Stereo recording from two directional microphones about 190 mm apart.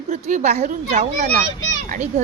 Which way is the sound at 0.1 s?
40° right (ahead or behind).